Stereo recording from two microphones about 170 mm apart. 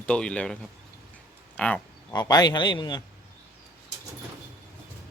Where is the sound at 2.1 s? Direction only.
25° left (ahead or behind).